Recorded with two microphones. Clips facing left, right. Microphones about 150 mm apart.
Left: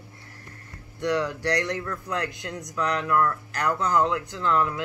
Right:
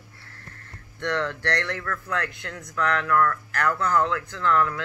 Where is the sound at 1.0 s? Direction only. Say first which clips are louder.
Left 2 dB; 15° left (ahead or behind).